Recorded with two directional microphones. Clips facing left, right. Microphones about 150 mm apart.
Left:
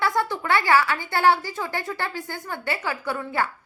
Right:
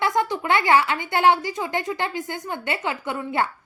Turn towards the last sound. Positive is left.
turn(degrees=-20)  # may be behind; listen again after turning